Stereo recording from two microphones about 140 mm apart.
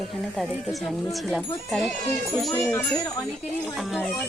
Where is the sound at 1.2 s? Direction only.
Centre (ahead or behind).